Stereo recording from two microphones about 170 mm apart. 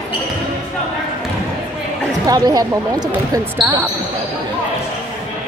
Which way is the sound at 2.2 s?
20° right (ahead or behind).